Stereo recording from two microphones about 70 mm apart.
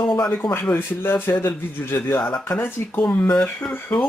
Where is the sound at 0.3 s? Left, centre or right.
Left.